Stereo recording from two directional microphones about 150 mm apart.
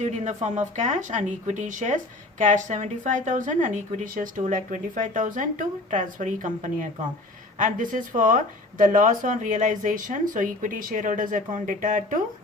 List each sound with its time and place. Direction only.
0.0 s a woman's voice: 55° right (ahead or behind)